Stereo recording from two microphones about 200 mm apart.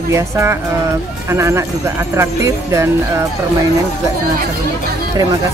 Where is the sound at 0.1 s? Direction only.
15° right (ahead or behind).